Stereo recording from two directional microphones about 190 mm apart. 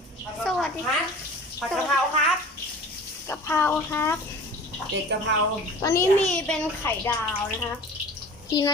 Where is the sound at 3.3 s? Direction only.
10° left (ahead or behind).